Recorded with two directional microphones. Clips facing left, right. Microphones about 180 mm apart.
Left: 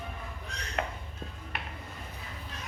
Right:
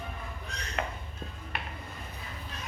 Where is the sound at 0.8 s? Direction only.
45° left (ahead or behind).